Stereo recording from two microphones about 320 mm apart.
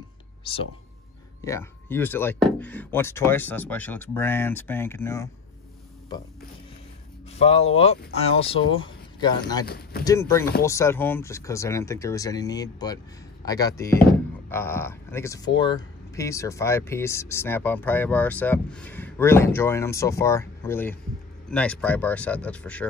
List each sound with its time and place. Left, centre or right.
0.5 s speech: centre
7.3 s speech: centre
9.7 s speech: left
10.0 s speech: centre